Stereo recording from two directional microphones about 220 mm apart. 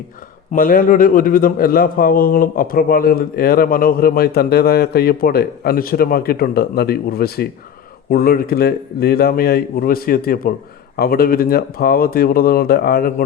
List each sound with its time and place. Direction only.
0.5 s a man's voice: 40° left (ahead or behind)